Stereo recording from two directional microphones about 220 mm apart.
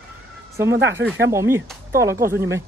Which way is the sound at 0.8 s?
55° right (ahead or behind).